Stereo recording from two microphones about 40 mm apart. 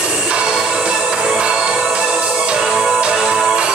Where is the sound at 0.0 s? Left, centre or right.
Right.